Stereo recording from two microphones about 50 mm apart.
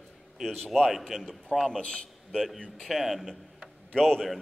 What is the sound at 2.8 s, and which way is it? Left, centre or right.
Speech, centre.